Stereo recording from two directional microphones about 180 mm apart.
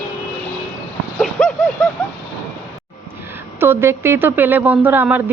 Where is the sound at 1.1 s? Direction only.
Centre (ahead or behind).